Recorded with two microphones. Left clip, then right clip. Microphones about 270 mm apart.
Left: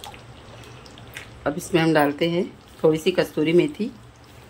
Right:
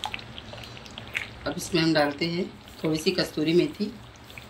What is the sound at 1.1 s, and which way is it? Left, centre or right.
A woman's voice, centre.